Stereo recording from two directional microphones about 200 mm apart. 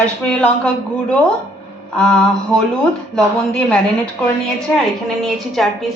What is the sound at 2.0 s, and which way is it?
A woman's voice, 5° left (ahead or behind).